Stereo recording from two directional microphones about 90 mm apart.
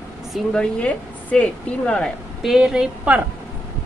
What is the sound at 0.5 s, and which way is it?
Speech, 10° left (ahead or behind).